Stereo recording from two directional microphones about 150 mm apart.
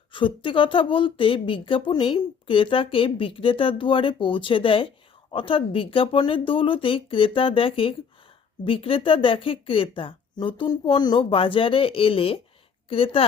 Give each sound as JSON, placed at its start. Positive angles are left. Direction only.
{"t": 0.1, "sound": "a woman's voice", "side_deg": 35}